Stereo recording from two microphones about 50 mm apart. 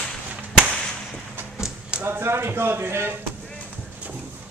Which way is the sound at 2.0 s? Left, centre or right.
Right.